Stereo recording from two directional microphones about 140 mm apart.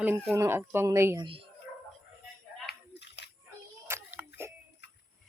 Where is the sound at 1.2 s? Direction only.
40° right (ahead or behind).